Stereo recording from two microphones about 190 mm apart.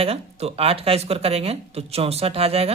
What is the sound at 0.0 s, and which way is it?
Speech, 30° right (ahead or behind).